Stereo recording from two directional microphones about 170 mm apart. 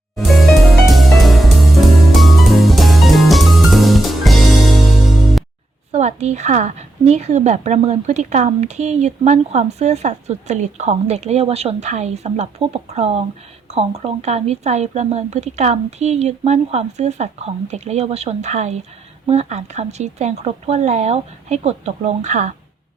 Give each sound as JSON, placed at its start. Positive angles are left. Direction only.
{"t": 0.2, "sound": "music", "side_deg": 0}
{"t": 5.9, "sound": "a woman's voice", "side_deg": -40}